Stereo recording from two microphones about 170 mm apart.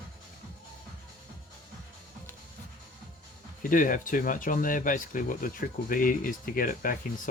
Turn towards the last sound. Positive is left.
turn(degrees=55)  # may be behind; listen again after turning